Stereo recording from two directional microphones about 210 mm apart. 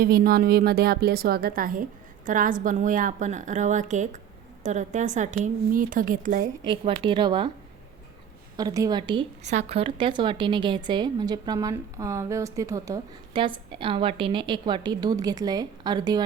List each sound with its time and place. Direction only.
0.0 s a woman's voice: 45° right (ahead or behind)
6.7 s a woman's voice: 25° right (ahead or behind)
8.5 s a woman's voice: 15° right (ahead or behind)